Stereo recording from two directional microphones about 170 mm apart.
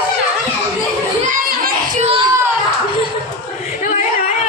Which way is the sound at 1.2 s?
50° right (ahead or behind).